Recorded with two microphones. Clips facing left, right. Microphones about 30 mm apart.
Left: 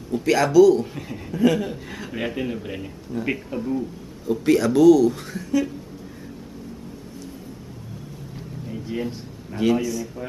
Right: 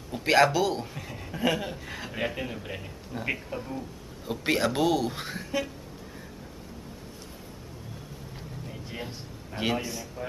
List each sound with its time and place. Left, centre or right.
0.2 s speech: right
0.9 s speech: centre
1.3 s a man's voice: centre
4.3 s speech: right
8.6 s a sound: centre
9.6 s speech: right